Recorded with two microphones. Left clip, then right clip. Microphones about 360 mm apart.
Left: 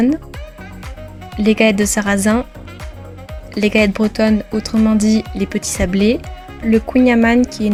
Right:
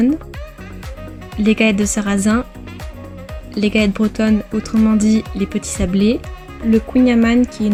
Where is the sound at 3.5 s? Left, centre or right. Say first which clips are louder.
Left 3 dB; centre.